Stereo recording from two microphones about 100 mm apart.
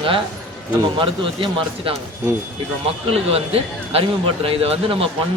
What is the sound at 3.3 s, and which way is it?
Speech, 80° right.